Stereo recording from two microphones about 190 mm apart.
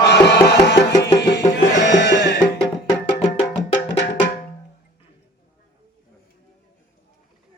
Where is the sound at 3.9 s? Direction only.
60° left (ahead or behind).